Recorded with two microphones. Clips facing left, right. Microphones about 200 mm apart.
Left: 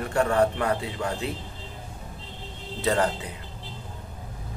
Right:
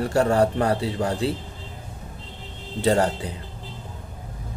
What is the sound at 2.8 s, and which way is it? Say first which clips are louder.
Speech: right 4 dB; 30° right (ahead or behind).